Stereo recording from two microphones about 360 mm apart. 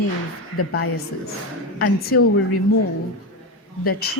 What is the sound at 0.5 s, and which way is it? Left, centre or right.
Speech, left.